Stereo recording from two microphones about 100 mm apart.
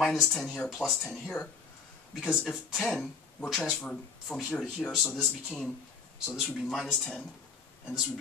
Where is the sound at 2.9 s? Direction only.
Centre (ahead or behind).